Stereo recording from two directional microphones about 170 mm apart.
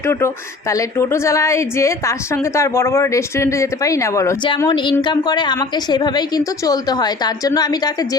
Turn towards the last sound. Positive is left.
turn(degrees=25)  # may be behind; listen again after turning